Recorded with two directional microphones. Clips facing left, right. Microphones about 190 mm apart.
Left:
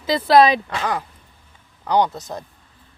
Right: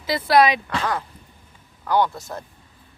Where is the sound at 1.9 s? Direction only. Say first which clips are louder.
Left 2 dB; 20° left (ahead or behind).